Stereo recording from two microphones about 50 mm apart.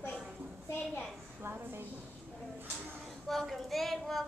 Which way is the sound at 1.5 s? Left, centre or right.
Right.